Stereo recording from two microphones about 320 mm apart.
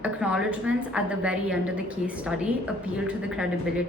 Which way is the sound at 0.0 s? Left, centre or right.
Centre.